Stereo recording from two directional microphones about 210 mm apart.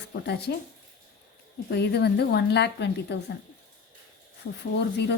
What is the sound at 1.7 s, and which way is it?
Speech, 50° left (ahead or behind).